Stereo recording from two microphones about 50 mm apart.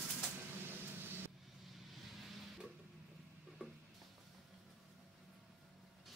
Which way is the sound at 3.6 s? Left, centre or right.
Right.